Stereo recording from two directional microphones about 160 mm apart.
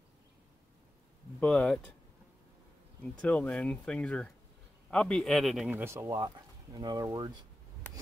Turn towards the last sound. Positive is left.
turn(degrees=-25)  # may be behind; listen again after turning